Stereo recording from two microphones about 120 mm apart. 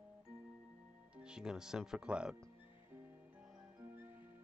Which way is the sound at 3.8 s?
20° right (ahead or behind).